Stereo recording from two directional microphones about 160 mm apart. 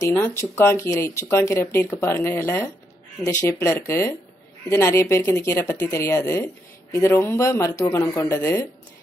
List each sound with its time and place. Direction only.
0.0 s speech: 15° left (ahead or behind)